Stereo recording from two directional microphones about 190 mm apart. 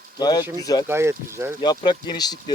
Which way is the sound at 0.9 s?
15° right (ahead or behind).